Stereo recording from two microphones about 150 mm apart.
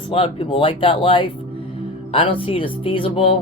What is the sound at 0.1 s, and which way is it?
Speech, 35° left (ahead or behind).